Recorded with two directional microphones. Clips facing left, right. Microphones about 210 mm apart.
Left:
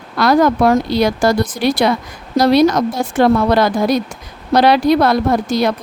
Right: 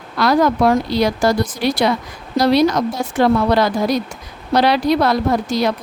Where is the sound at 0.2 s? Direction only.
50° left (ahead or behind).